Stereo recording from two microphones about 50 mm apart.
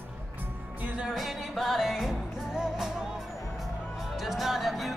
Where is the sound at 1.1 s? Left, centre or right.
Centre.